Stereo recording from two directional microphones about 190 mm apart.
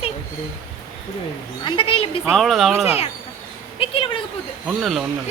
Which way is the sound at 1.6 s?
25° left (ahead or behind).